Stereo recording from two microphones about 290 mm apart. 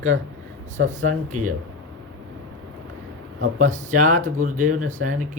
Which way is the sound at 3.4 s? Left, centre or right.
Right.